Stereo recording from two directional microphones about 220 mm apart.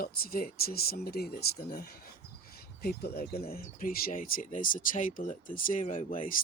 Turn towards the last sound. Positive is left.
turn(degrees=35)  # may be behind; listen again after turning